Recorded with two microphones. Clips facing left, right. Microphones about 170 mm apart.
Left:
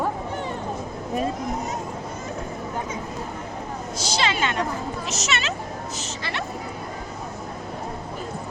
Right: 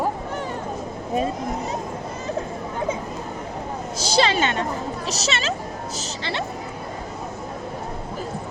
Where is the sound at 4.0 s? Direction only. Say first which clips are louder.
Right 5 dB; 35° right (ahead or behind).